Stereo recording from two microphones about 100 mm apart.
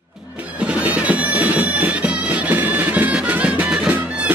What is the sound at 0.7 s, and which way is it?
Music, 10° right (ahead or behind).